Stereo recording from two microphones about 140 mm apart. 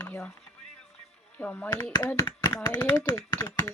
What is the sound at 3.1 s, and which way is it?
Speech, 25° left (ahead or behind).